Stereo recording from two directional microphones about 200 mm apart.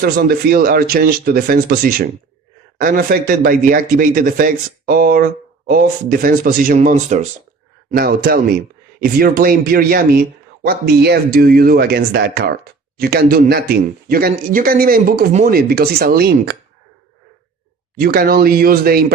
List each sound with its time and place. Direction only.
0.0 s speech: 50° right (ahead or behind)
7.9 s speech: 50° right (ahead or behind)
18.0 s speech: 50° right (ahead or behind)